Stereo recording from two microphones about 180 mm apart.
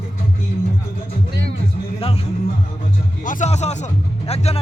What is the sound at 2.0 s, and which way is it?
Music, 30° left (ahead or behind).